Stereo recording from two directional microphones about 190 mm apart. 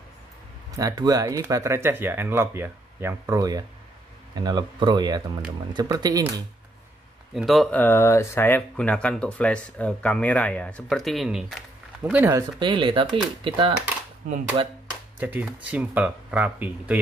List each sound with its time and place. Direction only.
0.7 s speech: 20° right (ahead or behind)
7.3 s speech: centre (ahead or behind)
12.5 s speech: 25° right (ahead or behind)
15.1 s speech: 10° right (ahead or behind)